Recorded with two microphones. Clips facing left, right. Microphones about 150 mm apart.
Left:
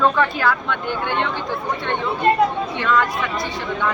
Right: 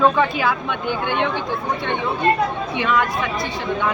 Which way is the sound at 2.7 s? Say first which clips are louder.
Even; 15° right (ahead or behind).